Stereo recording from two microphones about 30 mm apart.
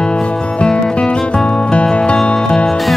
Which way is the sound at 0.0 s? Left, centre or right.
Left.